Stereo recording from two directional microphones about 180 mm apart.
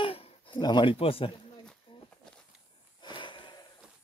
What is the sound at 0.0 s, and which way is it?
Dog, 30° left (ahead or behind).